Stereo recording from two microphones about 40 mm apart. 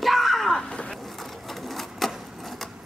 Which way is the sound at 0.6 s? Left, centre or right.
Left.